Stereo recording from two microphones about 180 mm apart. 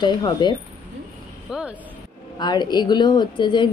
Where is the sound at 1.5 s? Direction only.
5° right (ahead or behind).